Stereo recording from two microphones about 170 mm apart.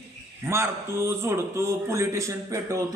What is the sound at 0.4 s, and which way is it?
A man's voice, 15° right (ahead or behind).